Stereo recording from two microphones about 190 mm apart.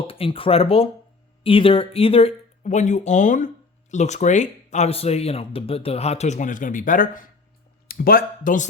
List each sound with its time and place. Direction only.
0.1 s speech: 30° left (ahead or behind); by 8.6 s 50° left (ahead or behind)